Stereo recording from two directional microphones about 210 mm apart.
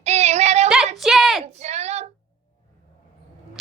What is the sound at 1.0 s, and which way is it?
Speech, centre (ahead or behind).